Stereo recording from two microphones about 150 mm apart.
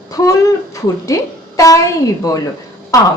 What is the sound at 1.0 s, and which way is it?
Speech, 20° left (ahead or behind).